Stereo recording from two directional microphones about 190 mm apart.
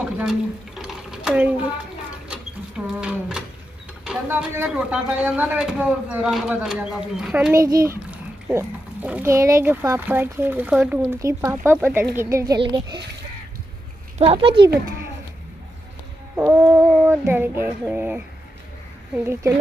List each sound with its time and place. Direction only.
0.0 s sewing machine: 5° right (ahead or behind)
2.9 s speech: 5° right (ahead or behind)
7.5 s a child's voice: 15° right (ahead or behind)
14.1 s speech: 30° right (ahead or behind)
16.3 s child singing: 10° right (ahead or behind)
19.1 s a child's voice: 15° right (ahead or behind)